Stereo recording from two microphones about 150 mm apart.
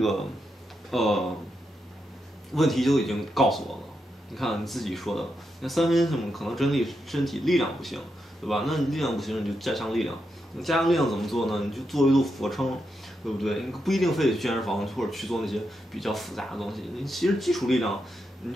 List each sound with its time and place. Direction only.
0.0 s speech: centre (ahead or behind)
2.5 s speech: centre (ahead or behind)